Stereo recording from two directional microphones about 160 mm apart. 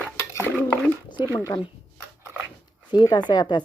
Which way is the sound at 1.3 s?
10° left (ahead or behind).